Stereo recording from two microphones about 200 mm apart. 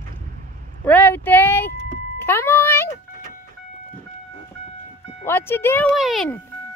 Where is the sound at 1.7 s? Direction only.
50° left (ahead or behind).